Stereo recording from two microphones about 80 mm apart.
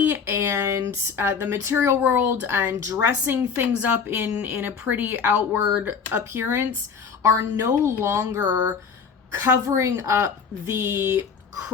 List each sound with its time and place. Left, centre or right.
0.0 s a woman's voice: right
5.6 s speech: centre
6.1 s speech: right
7.6 s speech: right
9.4 s speech: right